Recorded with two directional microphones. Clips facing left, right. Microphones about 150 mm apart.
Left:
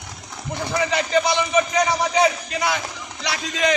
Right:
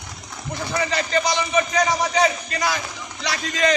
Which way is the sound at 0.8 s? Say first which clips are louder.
Left 3 dB; 10° left (ahead or behind).